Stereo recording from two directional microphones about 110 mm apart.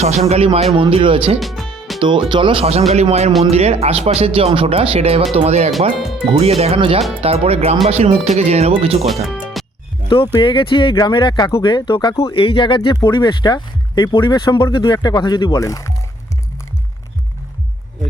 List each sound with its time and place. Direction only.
0.3 s speech: 65° right (ahead or behind)
1.4 s music: centre (ahead or behind)
2.0 s speech: 45° right (ahead or behind); by 2.8 s 60° right (ahead or behind)
2.9 s speech: 75° right (ahead or behind)
6.0 s music: 5° right (ahead or behind)
6.3 s speech: 70° right (ahead or behind)
6.7 s speech: 55° right (ahead or behind)
7.2 s speech: 65° right (ahead or behind)
9.3 s music: centre (ahead or behind)
10.1 s speech: 50° left (ahead or behind)
12.2 s speech: 55° left (ahead or behind); by 15.9 s 30° left (ahead or behind)